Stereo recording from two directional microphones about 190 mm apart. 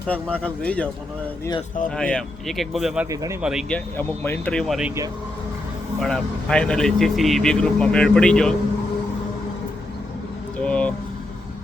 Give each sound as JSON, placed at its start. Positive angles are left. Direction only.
{"t": 0.1, "sound": "speech", "side_deg": 5}
{"t": 2.0, "sound": "speech", "side_deg": 5}
{"t": 3.9, "sound": "speech", "side_deg": 10}
{"t": 6.0, "sound": "speech", "side_deg": 5}
{"t": 10.6, "sound": "vehicle", "side_deg": 5}